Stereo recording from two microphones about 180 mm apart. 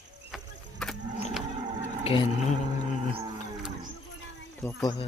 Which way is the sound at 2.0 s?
30° left (ahead or behind).